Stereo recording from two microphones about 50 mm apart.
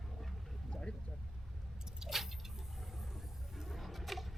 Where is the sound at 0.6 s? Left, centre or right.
Left.